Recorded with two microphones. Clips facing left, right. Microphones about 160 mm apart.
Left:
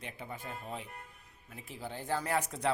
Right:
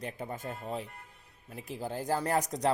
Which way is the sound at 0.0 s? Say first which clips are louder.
Right 6 dB; 45° right (ahead or behind).